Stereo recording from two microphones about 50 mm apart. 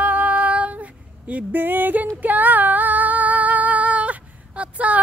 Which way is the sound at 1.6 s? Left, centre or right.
Right.